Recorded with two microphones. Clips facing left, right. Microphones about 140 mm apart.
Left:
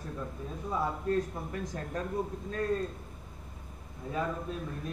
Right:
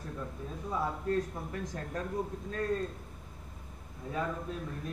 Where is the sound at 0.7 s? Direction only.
20° left (ahead or behind).